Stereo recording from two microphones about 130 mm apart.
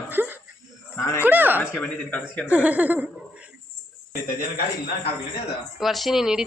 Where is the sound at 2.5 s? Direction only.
10° right (ahead or behind).